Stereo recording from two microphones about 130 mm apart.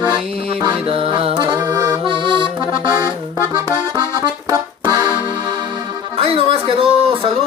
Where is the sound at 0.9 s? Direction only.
45° right (ahead or behind).